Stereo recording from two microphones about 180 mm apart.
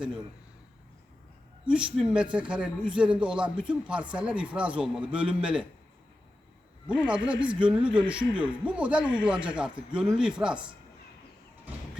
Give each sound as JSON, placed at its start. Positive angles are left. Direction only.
{"t": 1.6, "sound": "a man's voice", "side_deg": -5}
{"t": 7.1, "sound": "a man's voice", "side_deg": -5}